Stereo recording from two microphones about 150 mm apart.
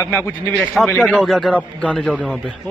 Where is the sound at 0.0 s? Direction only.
20° left (ahead or behind).